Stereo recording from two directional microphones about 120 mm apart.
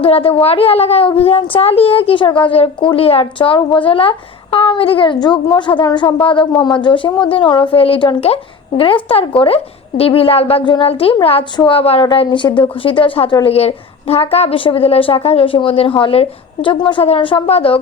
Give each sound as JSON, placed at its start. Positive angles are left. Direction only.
{"t": 0.0, "sound": "a woman's voice", "side_deg": 50}
{"t": 13.4, "sound": "a woman's voice", "side_deg": 60}